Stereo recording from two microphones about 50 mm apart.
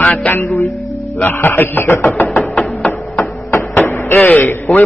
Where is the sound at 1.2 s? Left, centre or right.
Left.